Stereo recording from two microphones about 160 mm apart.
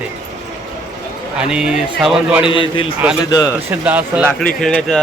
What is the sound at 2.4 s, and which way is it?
Speech, 30° left (ahead or behind).